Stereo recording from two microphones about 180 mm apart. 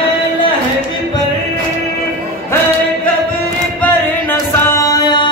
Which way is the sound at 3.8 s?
10° left (ahead or behind).